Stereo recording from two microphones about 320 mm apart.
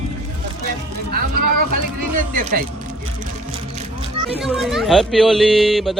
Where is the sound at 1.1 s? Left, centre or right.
Right.